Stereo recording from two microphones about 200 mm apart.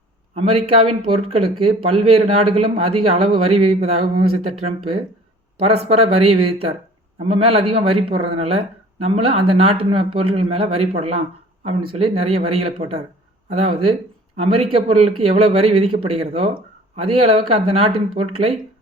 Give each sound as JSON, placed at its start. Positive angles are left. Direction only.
{"t": 0.3, "sound": "speech", "side_deg": -30}
{"t": 5.5, "sound": "speech", "side_deg": -30}